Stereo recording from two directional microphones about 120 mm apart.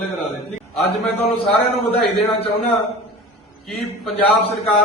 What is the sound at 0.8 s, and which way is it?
A man's voice, 60° left (ahead or behind).